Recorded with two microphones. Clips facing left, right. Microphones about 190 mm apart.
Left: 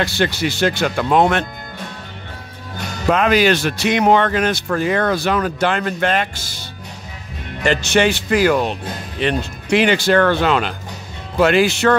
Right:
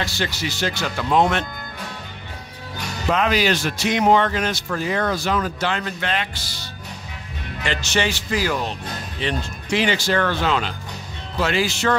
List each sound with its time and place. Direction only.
0.0 s speech: 60° left (ahead or behind)
3.1 s speech: 55° left (ahead or behind)
7.6 s speech: 50° left (ahead or behind)